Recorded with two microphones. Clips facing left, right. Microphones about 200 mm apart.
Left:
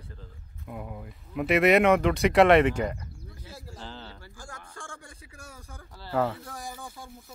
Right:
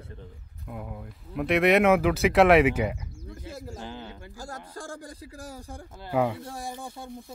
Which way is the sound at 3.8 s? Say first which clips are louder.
Right 4 dB; 15° right (ahead or behind).